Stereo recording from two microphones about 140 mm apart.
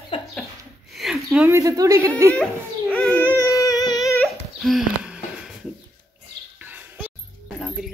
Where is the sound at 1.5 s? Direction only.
25° right (ahead or behind).